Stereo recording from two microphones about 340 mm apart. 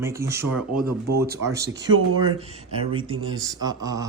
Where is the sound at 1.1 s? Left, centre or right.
Right.